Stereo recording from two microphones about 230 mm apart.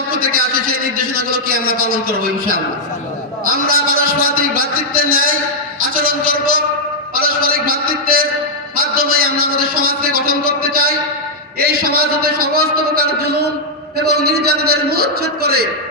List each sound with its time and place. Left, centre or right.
0.1 s a man's voice: right
3.7 s a man's voice: right
5.8 s a sound: right
8.8 s a man's voice: right